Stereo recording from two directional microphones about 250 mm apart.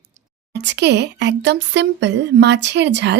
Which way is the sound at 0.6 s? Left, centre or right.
Right.